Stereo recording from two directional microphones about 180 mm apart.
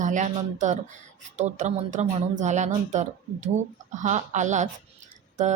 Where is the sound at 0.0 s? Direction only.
45° right (ahead or behind).